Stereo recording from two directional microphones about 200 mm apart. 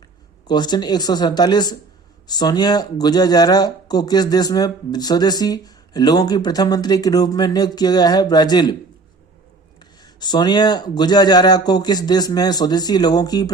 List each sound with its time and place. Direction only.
0.4 s speech: 20° left (ahead or behind)
10.0 s speech: 20° left (ahead or behind)